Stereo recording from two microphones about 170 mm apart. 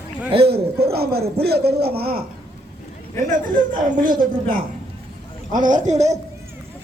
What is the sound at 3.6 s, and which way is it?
Speech, 55° right (ahead or behind).